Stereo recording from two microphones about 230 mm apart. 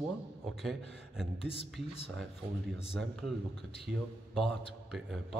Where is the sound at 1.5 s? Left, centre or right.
Left.